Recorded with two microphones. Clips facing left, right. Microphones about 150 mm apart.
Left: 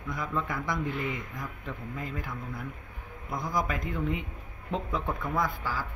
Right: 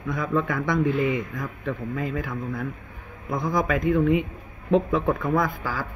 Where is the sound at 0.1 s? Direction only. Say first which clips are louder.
Right 8 dB; 80° right.